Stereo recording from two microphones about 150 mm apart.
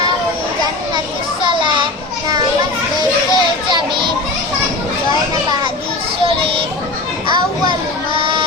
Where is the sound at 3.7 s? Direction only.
30° right (ahead or behind).